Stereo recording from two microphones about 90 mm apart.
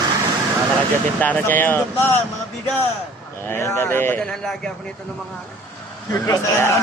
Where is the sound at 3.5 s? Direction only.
25° left (ahead or behind).